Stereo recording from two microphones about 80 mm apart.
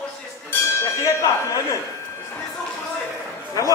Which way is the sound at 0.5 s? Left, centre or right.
Left.